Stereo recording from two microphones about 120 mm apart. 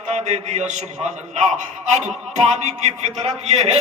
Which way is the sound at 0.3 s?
75° right (ahead or behind).